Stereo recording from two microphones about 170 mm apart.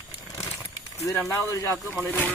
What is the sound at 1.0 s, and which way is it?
Speech, 15° left (ahead or behind).